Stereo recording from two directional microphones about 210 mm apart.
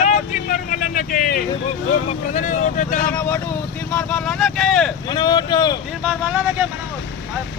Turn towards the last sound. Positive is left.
turn(degrees=-10)  # may be behind; listen again after turning